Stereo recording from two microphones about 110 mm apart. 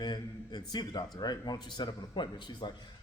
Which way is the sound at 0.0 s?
40° left (ahead or behind).